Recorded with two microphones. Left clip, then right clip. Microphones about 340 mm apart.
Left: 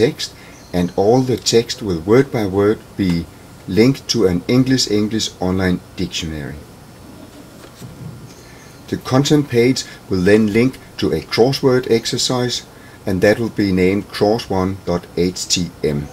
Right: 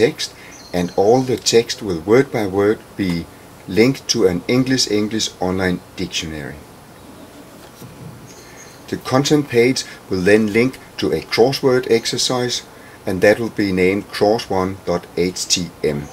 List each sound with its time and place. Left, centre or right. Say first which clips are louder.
0.0 s speech: even; centre
8.8 s speech: even; centre